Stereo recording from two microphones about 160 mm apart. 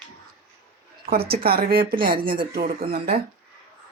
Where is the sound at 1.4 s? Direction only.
70° right (ahead or behind).